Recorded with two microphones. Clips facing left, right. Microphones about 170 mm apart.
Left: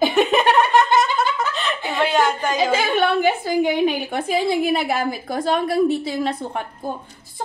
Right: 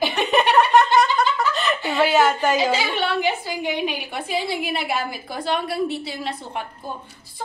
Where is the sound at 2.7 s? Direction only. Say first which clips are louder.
Left 5 dB; 50° left (ahead or behind).